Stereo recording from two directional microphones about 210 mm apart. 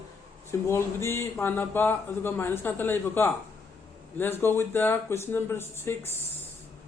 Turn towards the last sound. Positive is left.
turn(degrees=10)  # may be behind; listen again after turning